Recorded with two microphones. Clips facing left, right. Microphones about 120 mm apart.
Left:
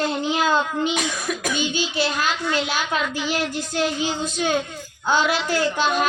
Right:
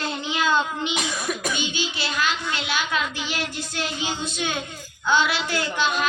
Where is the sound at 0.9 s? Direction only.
Centre (ahead or behind).